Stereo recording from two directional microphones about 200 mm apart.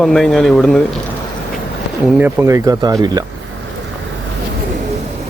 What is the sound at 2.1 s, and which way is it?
Speech, 10° right (ahead or behind).